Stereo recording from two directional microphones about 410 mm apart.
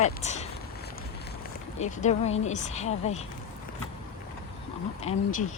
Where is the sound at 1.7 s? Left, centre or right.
Centre.